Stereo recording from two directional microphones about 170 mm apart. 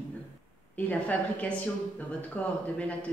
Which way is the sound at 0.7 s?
10° left (ahead or behind).